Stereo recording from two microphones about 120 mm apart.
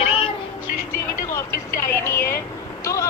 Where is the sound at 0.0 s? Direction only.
55° left (ahead or behind).